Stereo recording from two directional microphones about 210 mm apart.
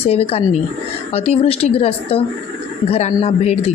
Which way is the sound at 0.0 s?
30° left (ahead or behind).